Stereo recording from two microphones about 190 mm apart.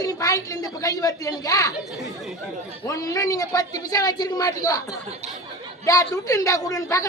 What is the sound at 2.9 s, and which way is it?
A woman's voice, 15° left (ahead or behind).